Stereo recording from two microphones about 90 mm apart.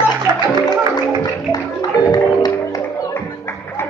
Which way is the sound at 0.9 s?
55° left (ahead or behind).